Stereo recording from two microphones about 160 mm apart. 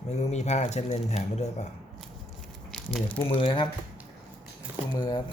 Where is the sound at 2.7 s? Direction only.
5° left (ahead or behind).